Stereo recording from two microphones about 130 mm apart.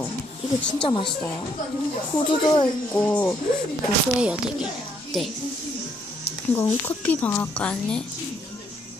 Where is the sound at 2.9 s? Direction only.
10° left (ahead or behind).